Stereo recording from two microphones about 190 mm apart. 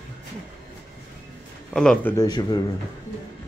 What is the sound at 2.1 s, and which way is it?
Speech, 20° left (ahead or behind).